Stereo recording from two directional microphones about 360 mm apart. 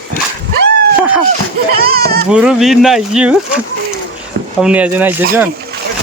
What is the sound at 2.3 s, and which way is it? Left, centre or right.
Speech, centre.